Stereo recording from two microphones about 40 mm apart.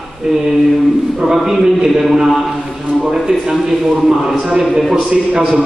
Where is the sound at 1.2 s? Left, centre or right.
Centre.